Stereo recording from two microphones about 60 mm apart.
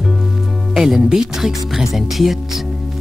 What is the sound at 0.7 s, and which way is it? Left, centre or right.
Speech, centre.